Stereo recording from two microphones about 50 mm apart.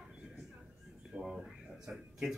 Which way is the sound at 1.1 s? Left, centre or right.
Centre.